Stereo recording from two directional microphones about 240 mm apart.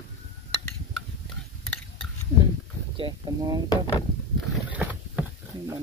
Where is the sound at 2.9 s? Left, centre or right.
Centre.